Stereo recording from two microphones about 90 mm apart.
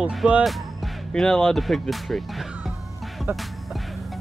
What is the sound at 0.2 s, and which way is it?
Speech, 10° right (ahead or behind).